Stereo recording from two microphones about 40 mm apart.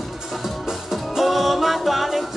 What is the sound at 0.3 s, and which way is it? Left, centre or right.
Music, centre.